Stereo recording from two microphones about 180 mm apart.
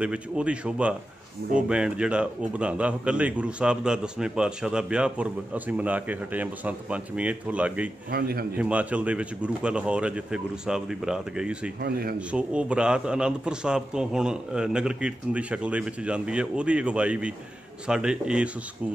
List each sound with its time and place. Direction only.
0.0 s a man's voice: 5° right (ahead or behind)
8.1 s a man's voice: 55° right (ahead or behind)
8.5 s a man's voice: 5° right (ahead or behind)
11.8 s a man's voice: 60° right (ahead or behind)
12.3 s a man's voice: 5° right (ahead or behind)